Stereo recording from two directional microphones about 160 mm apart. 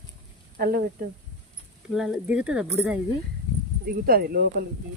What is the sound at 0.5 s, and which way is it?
Speech, 65° right (ahead or behind).